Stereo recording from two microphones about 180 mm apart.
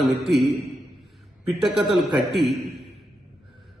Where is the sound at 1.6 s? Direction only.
Centre (ahead or behind).